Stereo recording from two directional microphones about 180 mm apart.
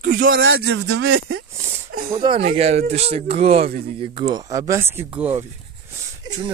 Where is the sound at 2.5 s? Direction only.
35° right (ahead or behind).